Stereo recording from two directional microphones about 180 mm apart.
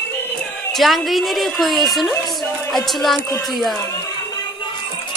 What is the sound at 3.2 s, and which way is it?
Speech, 15° left (ahead or behind).